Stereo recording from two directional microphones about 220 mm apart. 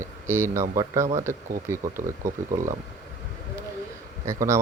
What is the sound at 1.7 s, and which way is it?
Speech, 10° right (ahead or behind).